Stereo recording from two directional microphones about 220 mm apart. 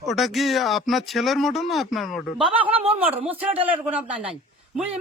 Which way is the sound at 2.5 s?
25° right (ahead or behind).